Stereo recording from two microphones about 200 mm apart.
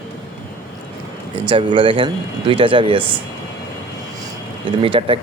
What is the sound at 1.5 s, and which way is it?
Speech, 25° right (ahead or behind).